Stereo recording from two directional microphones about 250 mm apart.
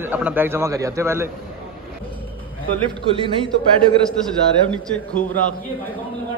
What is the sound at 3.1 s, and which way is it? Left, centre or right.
Speech, right.